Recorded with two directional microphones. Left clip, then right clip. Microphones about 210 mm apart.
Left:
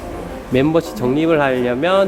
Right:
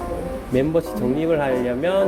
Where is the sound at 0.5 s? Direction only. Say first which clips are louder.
Left 4 dB; 20° left (ahead or behind).